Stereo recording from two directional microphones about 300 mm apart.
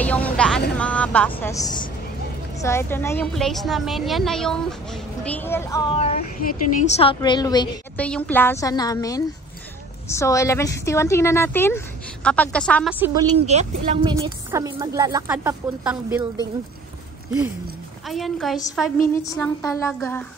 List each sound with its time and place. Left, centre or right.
0.0 s music: centre
0.7 s a woman's voice: centre
13.5 s speech: right
14.1 s a woman's voice: centre
18.0 s a woman's voice: centre